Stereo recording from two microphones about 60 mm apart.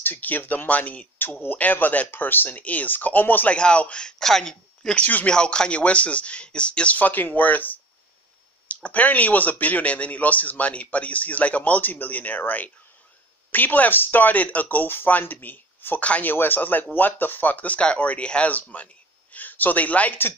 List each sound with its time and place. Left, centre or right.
0.0 s speech: left
3.5 s a man's voice: centre
4.2 s speech: centre
5.0 s speech: left
5.3 s speech: centre